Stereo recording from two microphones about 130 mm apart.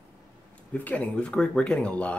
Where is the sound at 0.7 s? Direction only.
10° left (ahead or behind).